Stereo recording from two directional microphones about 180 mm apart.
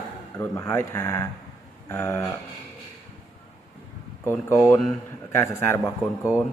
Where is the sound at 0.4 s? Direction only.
15° left (ahead or behind).